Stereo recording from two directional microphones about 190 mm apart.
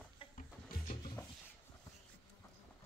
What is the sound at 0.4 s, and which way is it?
Music, 40° left (ahead or behind).